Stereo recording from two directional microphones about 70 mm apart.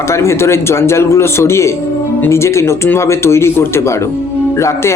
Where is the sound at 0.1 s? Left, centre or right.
Left.